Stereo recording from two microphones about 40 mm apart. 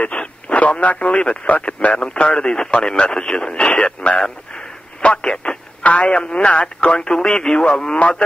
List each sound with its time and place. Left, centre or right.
0.0 s speech: left
2.4 s speech: centre
3.5 s speech: left
5.0 s radio: left
5.9 s speech: left